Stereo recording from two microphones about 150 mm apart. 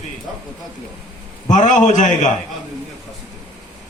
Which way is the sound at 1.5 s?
55° left (ahead or behind).